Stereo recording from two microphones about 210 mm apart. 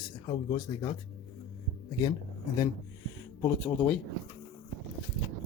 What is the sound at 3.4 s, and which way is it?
Speech, 5° left (ahead or behind).